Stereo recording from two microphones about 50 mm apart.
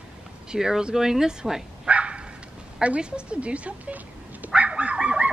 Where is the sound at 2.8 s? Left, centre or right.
Centre.